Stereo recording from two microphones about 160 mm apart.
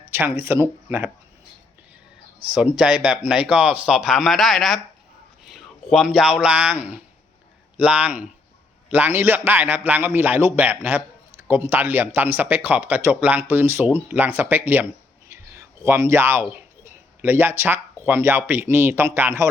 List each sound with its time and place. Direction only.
0.1 s a man's voice: 10° right (ahead or behind)
2.5 s a man's voice: 5° right (ahead or behind)
15.3 s a sound: 15° right (ahead or behind)
18.0 s a man's voice: 15° right (ahead or behind)